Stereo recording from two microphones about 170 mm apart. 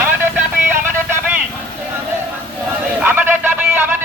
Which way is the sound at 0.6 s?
10° right (ahead or behind).